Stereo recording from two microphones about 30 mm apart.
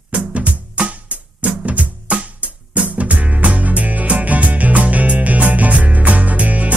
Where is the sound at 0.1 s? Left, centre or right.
Right.